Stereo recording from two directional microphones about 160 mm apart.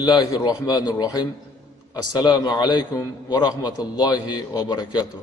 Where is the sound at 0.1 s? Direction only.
25° left (ahead or behind).